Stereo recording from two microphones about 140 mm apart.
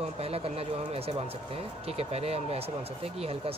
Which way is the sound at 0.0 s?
45° right (ahead or behind).